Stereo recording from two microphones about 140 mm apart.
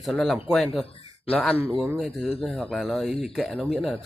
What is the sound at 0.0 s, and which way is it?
Speech, centre (ahead or behind).